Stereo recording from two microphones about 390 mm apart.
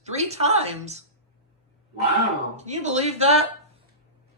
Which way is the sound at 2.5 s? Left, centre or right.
Centre.